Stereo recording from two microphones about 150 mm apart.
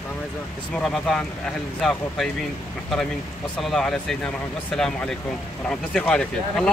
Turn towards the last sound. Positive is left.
turn(degrees=5)  # may be behind; listen again after turning